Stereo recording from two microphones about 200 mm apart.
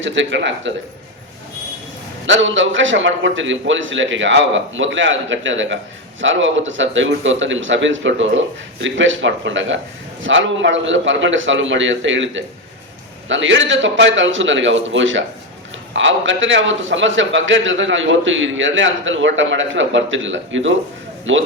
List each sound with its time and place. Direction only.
0.0 s a man's voice: 65° right (ahead or behind)
2.2 s a man's voice: 70° right (ahead or behind)